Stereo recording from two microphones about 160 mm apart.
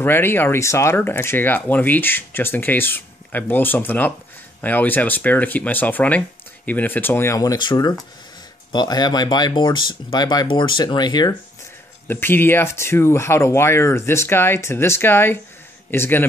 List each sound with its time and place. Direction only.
0.0 s speech: 15° left (ahead or behind)
12.1 s speech: 15° left (ahead or behind)